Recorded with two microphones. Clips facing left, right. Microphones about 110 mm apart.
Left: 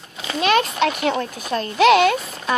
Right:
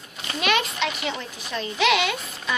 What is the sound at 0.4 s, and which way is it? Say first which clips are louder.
A child's voice: left 6 dB; 40° left (ahead or behind).